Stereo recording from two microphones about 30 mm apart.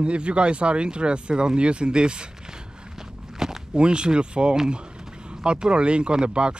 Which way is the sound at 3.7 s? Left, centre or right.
Right.